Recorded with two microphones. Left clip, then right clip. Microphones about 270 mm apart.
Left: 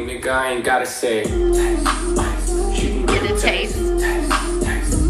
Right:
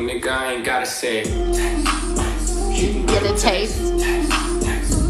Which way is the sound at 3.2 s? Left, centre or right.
Centre.